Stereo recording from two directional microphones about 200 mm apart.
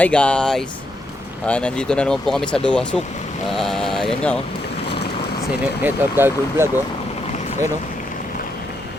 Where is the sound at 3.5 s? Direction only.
Centre (ahead or behind).